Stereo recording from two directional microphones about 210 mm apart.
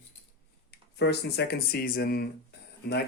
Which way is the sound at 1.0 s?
55° left (ahead or behind).